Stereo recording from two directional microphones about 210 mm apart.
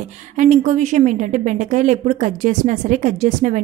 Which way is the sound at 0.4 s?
35° right (ahead or behind).